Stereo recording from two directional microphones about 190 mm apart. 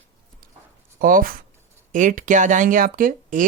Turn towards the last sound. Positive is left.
turn(degrees=-45)  # may be behind; listen again after turning